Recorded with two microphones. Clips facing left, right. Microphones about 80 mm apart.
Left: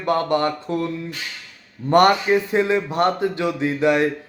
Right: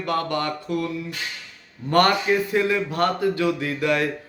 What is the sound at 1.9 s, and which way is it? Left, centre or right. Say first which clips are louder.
A man's voice: left 4 dB; left.